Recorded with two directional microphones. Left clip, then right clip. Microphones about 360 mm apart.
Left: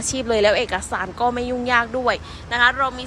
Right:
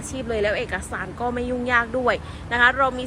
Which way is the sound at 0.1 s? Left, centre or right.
Centre.